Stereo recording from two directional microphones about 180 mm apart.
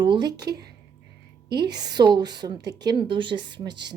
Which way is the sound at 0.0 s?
25° right (ahead or behind).